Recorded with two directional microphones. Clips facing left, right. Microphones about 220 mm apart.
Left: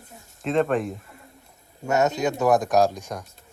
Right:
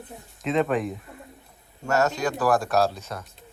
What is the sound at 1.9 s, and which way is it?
Speech, 20° left (ahead or behind).